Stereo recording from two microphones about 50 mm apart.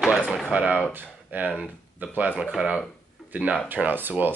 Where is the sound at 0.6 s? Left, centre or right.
Right.